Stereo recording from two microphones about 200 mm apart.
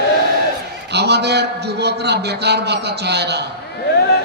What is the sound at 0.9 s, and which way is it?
A man's voice, 55° right (ahead or behind).